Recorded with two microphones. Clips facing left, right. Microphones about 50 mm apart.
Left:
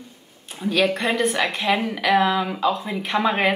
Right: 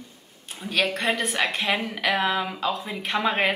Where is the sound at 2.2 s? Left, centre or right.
Centre.